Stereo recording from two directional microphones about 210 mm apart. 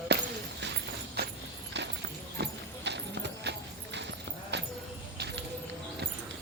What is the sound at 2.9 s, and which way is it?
Clip-clop, 55° right (ahead or behind).